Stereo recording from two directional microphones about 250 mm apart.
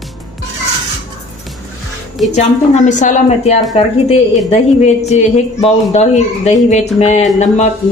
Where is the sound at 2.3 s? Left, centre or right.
Left.